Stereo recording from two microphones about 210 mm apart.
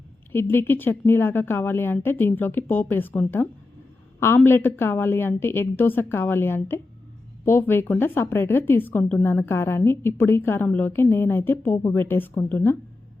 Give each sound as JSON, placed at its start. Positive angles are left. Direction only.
{"t": 0.3, "sound": "a woman's voice", "side_deg": 10}